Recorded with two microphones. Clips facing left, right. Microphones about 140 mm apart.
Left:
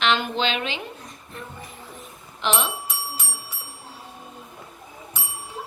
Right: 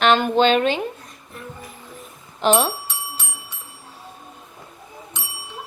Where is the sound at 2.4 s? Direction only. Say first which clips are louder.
Right 7 dB; 45° right (ahead or behind).